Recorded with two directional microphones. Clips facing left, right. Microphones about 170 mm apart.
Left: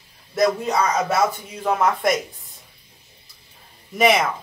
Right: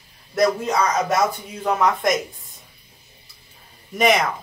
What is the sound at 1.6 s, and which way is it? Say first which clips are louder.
Speech: even; 5° left (ahead or behind).